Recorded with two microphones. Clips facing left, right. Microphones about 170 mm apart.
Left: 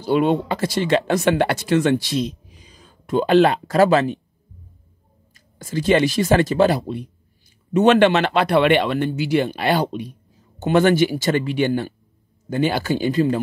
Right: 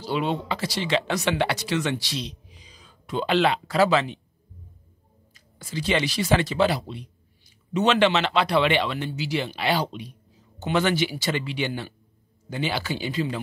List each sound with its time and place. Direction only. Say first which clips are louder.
0.0 s speech: left 8 dB; 50° left (ahead or behind)
5.3 s speech: left 7 dB; 50° left (ahead or behind)